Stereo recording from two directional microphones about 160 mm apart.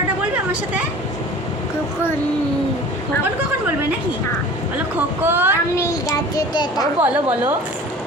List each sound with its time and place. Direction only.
5.2 s a woman's voice: 15° right (ahead or behind)
5.7 s a child's voice: 20° left (ahead or behind)
7.0 s a woman's voice: 10° right (ahead or behind)